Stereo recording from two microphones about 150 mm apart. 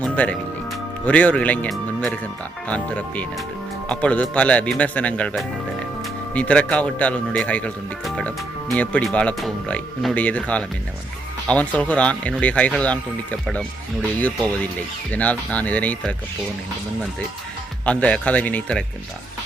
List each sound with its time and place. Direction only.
0.0 s speech: 10° left (ahead or behind)
15.1 s speech: 10° left (ahead or behind)
17.8 s speech: 10° left (ahead or behind)